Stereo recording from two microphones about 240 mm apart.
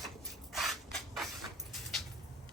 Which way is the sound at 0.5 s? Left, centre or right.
Centre.